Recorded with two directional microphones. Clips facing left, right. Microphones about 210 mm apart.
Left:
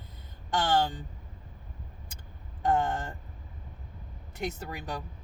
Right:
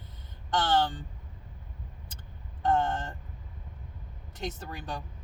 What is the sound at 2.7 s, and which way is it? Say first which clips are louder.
Speech: even; 10° left (ahead or behind).